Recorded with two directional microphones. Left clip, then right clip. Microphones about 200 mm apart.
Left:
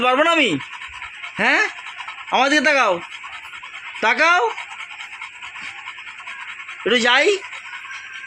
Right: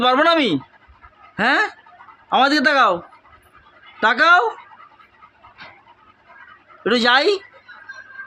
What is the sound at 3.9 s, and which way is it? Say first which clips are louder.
Speech: right 2 dB; 15° right (ahead or behind).